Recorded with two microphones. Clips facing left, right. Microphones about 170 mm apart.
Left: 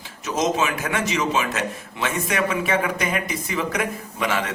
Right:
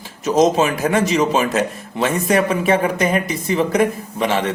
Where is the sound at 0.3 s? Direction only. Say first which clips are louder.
Right 8 dB; 35° right (ahead or behind).